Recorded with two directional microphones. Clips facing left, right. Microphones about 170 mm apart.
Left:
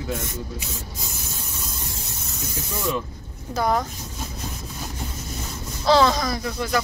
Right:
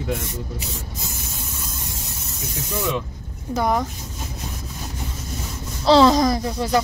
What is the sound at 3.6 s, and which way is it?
Speech, 15° right (ahead or behind).